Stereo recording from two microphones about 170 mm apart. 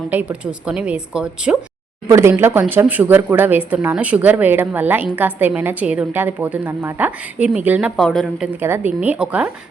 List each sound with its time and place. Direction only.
0.1 s a woman's voice: 10° right (ahead or behind)
2.0 s a woman's voice: 15° right (ahead or behind); by 8.4 s centre (ahead or behind)
8.4 s a woman's voice: 10° right (ahead or behind)